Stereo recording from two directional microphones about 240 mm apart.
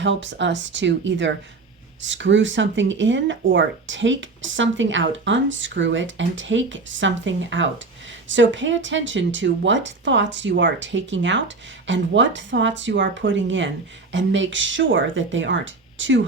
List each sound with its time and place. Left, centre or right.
0.0 s speech: right